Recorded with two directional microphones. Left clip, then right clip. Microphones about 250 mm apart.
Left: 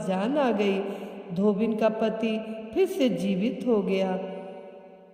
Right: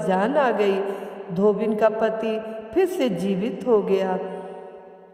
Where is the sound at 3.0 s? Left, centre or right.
Centre.